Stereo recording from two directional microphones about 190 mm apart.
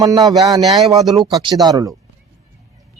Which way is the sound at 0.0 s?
20° right (ahead or behind).